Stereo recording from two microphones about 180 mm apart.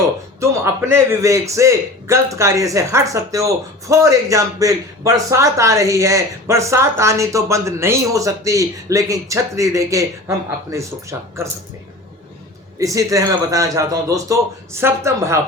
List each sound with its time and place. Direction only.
0.3 s a man's voice: 15° right (ahead or behind)
12.8 s a man's voice: 20° right (ahead or behind)